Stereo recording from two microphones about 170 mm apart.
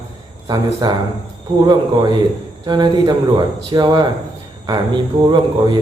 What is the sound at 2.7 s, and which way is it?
Speech, 25° right (ahead or behind).